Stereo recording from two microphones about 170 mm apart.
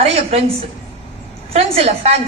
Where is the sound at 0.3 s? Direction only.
40° right (ahead or behind).